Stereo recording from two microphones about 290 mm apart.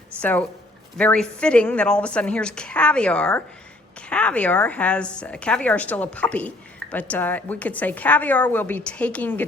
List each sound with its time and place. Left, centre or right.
0.2 s a woman's voice: centre